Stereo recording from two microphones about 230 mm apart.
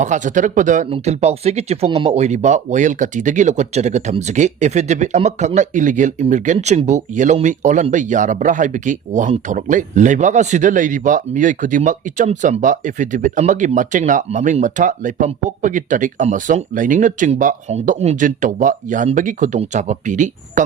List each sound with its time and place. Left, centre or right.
0.0 s speech: right